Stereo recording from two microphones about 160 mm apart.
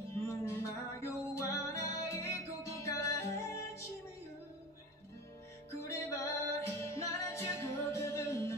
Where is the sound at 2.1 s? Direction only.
20° left (ahead or behind).